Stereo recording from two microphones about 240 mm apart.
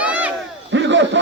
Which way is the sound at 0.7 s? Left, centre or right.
Right.